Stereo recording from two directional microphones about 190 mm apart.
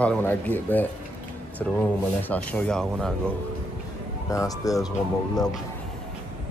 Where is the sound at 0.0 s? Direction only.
10° left (ahead or behind).